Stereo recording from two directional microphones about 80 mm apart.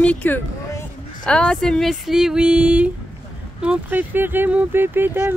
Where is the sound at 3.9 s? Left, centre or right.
Right.